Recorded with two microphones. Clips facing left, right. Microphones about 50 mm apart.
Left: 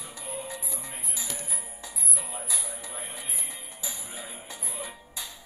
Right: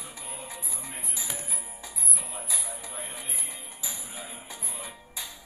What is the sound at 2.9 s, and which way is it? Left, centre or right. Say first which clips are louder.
Music: even; centre.